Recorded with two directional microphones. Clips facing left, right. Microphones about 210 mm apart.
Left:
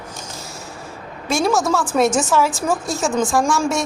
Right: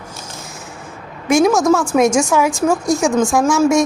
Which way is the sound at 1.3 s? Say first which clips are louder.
Right 6 dB; 15° right (ahead or behind).